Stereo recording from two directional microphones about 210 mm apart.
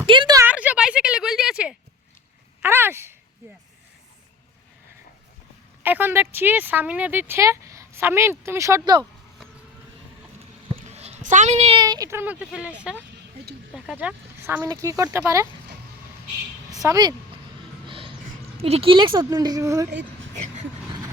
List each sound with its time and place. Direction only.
0.0 s speech: 20° right (ahead or behind)
0.4 s a sound: 5° right (ahead or behind)
5.8 s speech: 10° right (ahead or behind)
10.8 s speech: 30° right (ahead or behind); by 15.4 s 15° right (ahead or behind)
16.8 s speech: 15° right (ahead or behind)
17.8 s a sound: 25° right (ahead or behind)
18.5 s a woman's voice: 30° right (ahead or behind)
20.6 s vehicle: 20° right (ahead or behind)